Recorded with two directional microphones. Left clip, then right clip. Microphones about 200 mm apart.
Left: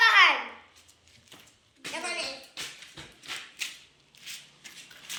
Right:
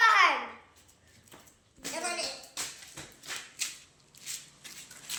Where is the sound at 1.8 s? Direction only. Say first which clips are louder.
Left 1 dB; 45° right (ahead or behind).